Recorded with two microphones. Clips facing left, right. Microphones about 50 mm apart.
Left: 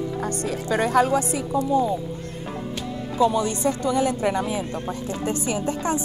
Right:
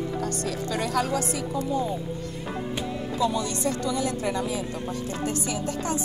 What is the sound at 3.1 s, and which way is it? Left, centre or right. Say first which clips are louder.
Speech: left 6 dB; left.